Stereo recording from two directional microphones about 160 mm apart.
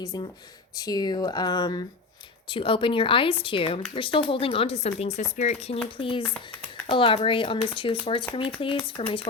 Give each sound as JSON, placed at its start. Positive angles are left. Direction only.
{"t": 0.0, "sound": "speech", "side_deg": 20}